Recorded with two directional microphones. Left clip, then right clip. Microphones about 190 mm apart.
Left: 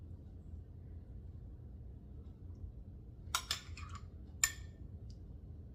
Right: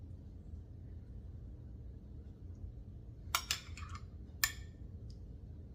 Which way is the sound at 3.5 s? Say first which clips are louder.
Right 1 dB; 5° right (ahead or behind).